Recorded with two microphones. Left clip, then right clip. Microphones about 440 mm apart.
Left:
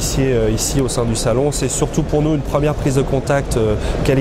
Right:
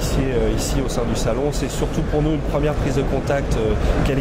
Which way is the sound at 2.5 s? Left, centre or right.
Left.